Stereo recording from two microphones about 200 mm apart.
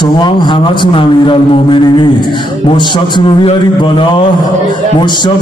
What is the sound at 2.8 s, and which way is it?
A man's voice, 25° left (ahead or behind).